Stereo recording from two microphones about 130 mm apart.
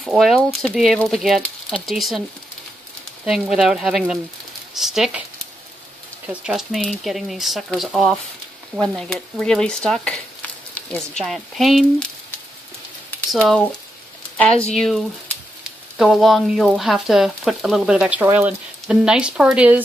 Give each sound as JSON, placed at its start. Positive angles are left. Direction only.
{"t": 0.0, "sound": "frying", "side_deg": 0}
{"t": 3.3, "sound": "frying", "side_deg": -5}
{"t": 6.4, "sound": "frying", "side_deg": 0}
{"t": 13.3, "sound": "frying", "side_deg": 0}
{"t": 14.3, "sound": "a sound", "side_deg": 10}
{"t": 14.7, "sound": "frying", "side_deg": 5}
{"t": 16.0, "sound": "speech", "side_deg": 0}